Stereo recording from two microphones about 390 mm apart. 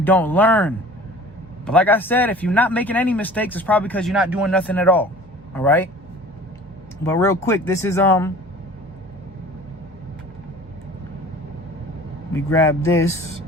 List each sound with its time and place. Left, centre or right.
0.0 s speech: centre
7.0 s speech: centre
12.3 s speech: centre
12.9 s speech: left